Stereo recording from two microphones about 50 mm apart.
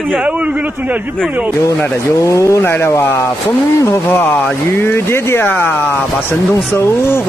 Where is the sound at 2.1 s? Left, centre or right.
Left.